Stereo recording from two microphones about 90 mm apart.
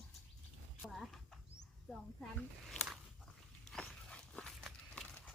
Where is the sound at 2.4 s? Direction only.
5° left (ahead or behind).